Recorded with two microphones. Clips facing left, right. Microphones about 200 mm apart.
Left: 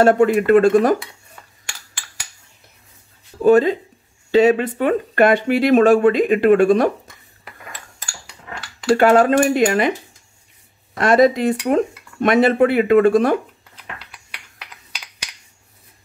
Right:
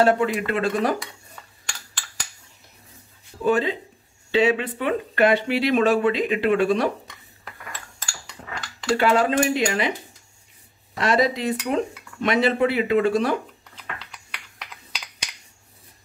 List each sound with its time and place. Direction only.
0.0 s speech: 50° left (ahead or behind)
1.3 s a sound: 5° left (ahead or behind)
3.4 s speech: 45° left (ahead or behind)
8.9 s speech: 50° left (ahead or behind)
11.0 s speech: 50° left (ahead or behind)